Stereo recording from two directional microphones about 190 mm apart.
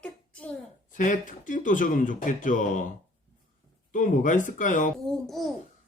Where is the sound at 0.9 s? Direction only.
45° left (ahead or behind).